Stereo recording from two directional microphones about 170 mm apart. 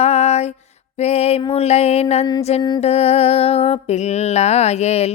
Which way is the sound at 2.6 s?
25° left (ahead or behind).